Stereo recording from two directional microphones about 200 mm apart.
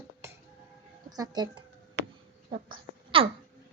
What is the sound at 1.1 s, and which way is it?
Speech, 20° right (ahead or behind).